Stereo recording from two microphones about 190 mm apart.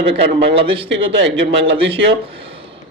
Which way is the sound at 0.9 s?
70° right (ahead or behind).